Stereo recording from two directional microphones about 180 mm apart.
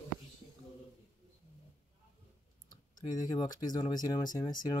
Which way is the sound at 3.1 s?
20° left (ahead or behind).